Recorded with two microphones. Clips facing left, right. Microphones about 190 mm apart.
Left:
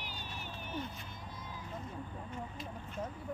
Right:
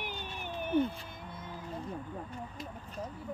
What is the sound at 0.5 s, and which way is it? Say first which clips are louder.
Cat: right 13 dB; 55° right (ahead or behind).